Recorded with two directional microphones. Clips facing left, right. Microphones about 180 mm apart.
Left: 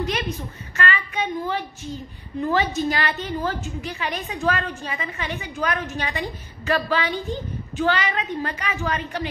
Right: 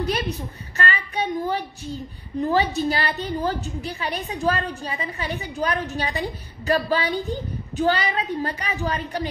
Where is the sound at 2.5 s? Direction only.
35° right (ahead or behind).